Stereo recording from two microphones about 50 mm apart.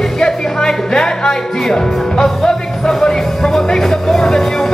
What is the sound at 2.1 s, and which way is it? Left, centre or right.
Music, centre.